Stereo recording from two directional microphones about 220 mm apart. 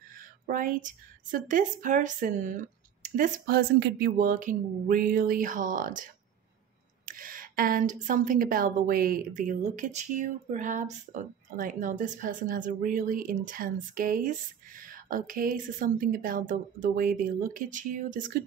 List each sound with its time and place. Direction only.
0.5 s speech: 40° right (ahead or behind)
7.1 s speech: 40° right (ahead or behind)